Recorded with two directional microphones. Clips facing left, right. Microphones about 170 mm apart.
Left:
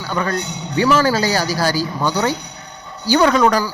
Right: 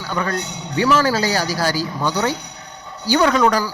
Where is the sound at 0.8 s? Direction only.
30° left (ahead or behind).